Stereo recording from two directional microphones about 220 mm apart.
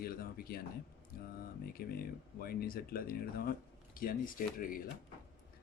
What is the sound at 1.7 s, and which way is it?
Speech, 40° left (ahead or behind).